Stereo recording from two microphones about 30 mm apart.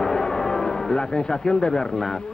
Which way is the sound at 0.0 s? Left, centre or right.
Centre.